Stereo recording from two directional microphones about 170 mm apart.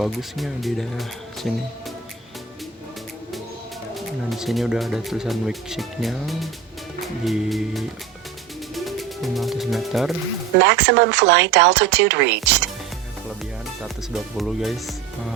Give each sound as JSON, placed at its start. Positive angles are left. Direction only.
{"t": 0.0, "sound": "speech", "side_deg": 0}
{"t": 3.9, "sound": "speech", "side_deg": 0}
{"t": 10.6, "sound": "speech", "side_deg": -85}
{"t": 13.8, "sound": "speech", "side_deg": 0}